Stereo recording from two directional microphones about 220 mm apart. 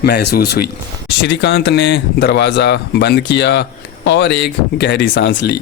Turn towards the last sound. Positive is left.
turn(degrees=50)  # may be behind; listen again after turning